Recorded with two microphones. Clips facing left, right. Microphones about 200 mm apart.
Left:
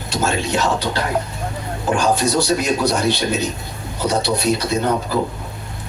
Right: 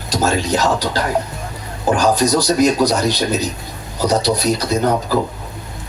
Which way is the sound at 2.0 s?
35° right (ahead or behind).